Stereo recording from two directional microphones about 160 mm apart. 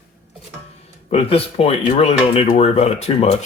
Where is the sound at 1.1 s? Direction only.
35° left (ahead or behind).